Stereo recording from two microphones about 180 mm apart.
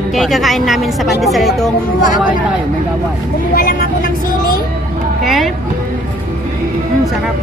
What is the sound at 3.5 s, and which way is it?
Speech, 55° left (ahead or behind).